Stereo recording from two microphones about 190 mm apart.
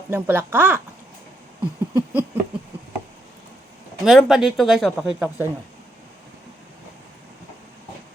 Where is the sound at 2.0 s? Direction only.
10° right (ahead or behind).